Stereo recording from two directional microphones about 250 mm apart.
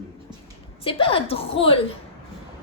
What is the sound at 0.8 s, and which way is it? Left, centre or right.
Speech, left.